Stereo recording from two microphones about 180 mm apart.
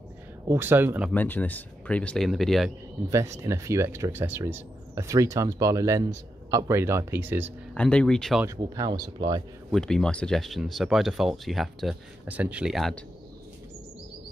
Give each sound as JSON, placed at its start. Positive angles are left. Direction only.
{"t": 0.5, "sound": "speech", "side_deg": -10}
{"t": 1.1, "sound": "speech", "side_deg": 10}
{"t": 3.1, "sound": "speech", "side_deg": -15}
{"t": 7.7, "sound": "speech", "side_deg": 5}
{"t": 8.5, "sound": "speech", "side_deg": -20}
{"t": 9.7, "sound": "speech", "side_deg": 5}